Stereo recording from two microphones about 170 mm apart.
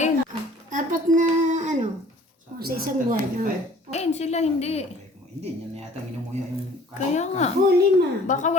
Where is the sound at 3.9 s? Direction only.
40° left (ahead or behind).